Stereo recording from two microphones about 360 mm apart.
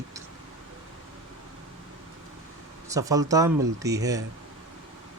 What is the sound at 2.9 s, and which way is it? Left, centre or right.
Speech, centre.